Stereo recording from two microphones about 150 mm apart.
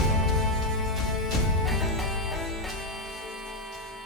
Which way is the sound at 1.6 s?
Centre (ahead or behind).